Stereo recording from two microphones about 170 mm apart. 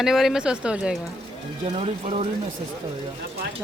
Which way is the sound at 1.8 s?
35° right (ahead or behind).